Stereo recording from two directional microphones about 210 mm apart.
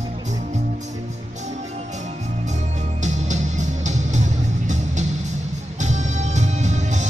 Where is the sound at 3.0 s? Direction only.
35° right (ahead or behind).